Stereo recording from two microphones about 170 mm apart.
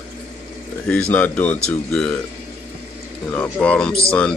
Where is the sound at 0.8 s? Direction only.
10° left (ahead or behind).